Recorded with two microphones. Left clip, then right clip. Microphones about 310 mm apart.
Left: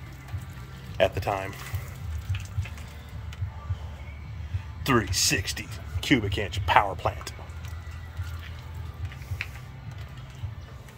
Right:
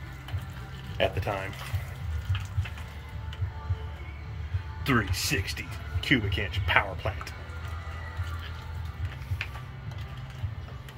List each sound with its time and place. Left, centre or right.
0.9 s speech: centre
4.8 s speech: centre